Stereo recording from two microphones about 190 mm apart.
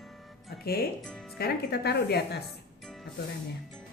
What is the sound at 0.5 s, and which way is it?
Music, 55° left (ahead or behind).